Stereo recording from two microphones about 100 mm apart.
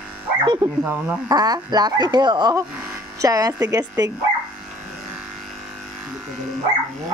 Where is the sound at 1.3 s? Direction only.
40° right (ahead or behind).